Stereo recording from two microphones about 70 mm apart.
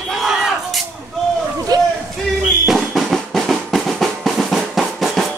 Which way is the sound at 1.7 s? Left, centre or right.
Right.